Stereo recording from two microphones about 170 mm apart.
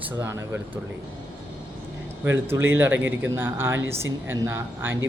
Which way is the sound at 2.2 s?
15° right (ahead or behind).